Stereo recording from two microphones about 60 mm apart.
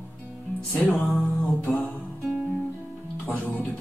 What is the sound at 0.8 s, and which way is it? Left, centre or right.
Music, centre.